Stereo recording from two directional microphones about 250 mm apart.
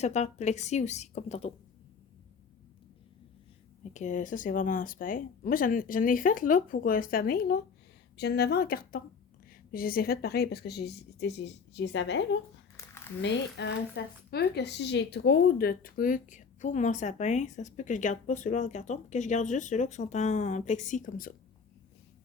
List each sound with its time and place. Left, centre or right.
0.0 s a woman's voice: left
3.9 s speech: left
12.7 s a sound: centre
13.2 s a woman's voice: left